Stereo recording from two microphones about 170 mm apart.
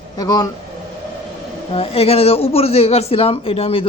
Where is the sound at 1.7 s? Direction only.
35° left (ahead or behind).